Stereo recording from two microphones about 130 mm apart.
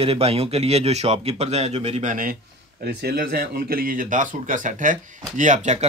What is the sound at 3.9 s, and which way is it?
Speech, 90° right.